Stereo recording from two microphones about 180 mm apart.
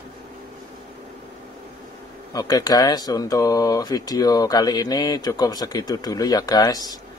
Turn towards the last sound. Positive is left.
turn(degrees=20)  # may be behind; listen again after turning